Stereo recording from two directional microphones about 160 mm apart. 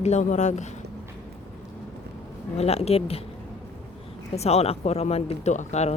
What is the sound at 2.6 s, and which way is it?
Speech, 40° left (ahead or behind).